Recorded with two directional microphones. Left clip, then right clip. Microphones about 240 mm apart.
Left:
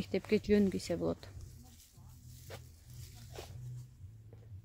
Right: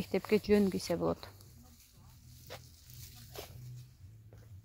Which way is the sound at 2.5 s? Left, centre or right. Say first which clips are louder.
Right 2 dB; right.